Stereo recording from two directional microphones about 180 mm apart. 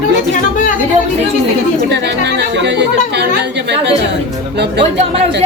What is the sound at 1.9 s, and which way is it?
Speech, 70° right (ahead or behind).